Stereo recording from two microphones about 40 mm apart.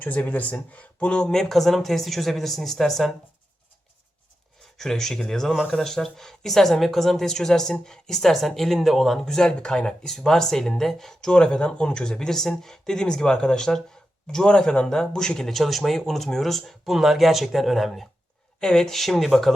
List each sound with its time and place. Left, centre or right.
0.0 s speech: left
1.2 s speech: centre
4.8 s speech: centre
9.2 s speech: centre
10.2 s speech: centre
11.3 s speech: left
15.4 s speech: centre
18.6 s speech: centre
18.9 s speech: centre